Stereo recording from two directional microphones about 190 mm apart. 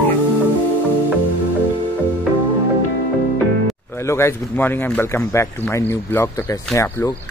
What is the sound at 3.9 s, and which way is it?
Speech, 15° left (ahead or behind).